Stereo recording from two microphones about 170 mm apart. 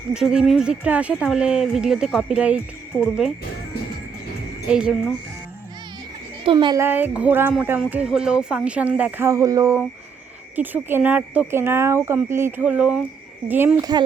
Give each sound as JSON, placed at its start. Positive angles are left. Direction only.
{"t": 0.1, "sound": "speech", "side_deg": -5}
{"t": 2.9, "sound": "speech", "side_deg": 5}
{"t": 4.7, "sound": "speech", "side_deg": -5}
{"t": 6.4, "sound": "a child's voice", "side_deg": -30}
{"t": 6.7, "sound": "speech", "side_deg": -10}